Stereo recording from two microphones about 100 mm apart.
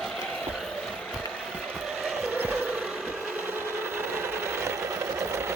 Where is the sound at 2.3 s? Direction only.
15° right (ahead or behind).